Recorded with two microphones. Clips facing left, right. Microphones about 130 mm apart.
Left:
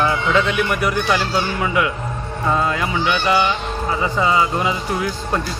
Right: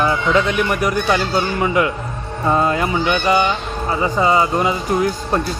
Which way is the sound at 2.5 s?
40° right (ahead or behind).